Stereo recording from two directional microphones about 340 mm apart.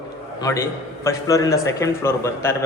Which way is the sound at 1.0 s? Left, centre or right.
Centre.